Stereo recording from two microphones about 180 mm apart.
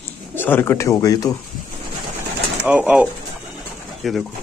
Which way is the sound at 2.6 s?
10° right (ahead or behind).